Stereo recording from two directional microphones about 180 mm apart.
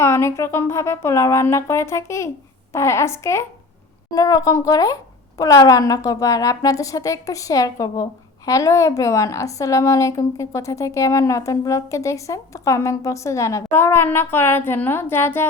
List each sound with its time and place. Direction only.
0.0 s a woman's voice: 15° left (ahead or behind)